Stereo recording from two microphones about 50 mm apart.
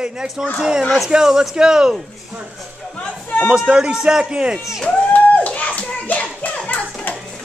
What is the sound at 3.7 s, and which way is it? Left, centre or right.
Speech, centre.